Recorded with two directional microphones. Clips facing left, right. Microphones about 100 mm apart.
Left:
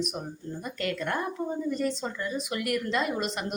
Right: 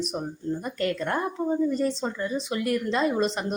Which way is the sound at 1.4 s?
20° right (ahead or behind).